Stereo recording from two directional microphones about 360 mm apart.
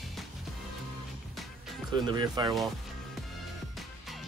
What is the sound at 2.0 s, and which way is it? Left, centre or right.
Speech, centre.